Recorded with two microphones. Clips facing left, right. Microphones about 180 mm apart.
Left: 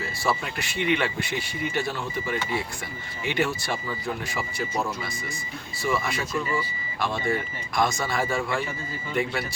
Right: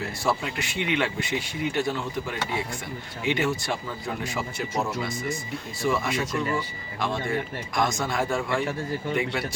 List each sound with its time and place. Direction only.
0.3 s speech: 20° right (ahead or behind)
3.2 s speech: 20° right (ahead or behind)